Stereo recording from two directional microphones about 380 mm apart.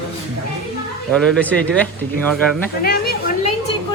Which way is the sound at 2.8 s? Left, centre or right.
Left.